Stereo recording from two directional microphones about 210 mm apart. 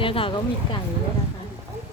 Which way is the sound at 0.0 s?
25° left (ahead or behind).